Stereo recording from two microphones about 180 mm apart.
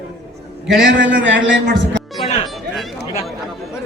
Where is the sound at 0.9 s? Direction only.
85° right.